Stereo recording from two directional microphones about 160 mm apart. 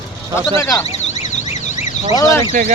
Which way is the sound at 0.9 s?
45° left (ahead or behind).